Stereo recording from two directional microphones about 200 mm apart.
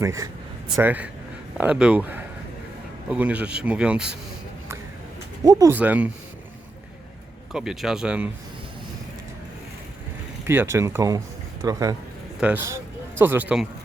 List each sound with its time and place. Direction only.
0.0 s speech: 15° right (ahead or behind)
5.4 s speech: 15° right (ahead or behind)
7.5 s speech: centre (ahead or behind)
10.4 s speech: 10° right (ahead or behind)